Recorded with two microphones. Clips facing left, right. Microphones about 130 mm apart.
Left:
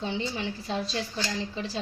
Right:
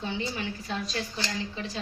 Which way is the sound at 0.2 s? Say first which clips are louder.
Left 1 dB; 30° left (ahead or behind).